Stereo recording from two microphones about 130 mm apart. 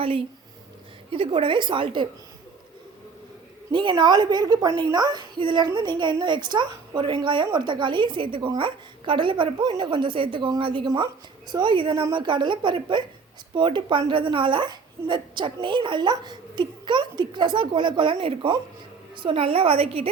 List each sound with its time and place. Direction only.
1.1 s a woman's voice: 45° right (ahead or behind)
3.7 s a woman's voice: 35° right (ahead or behind)